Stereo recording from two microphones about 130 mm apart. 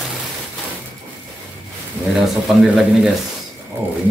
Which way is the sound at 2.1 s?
Centre (ahead or behind).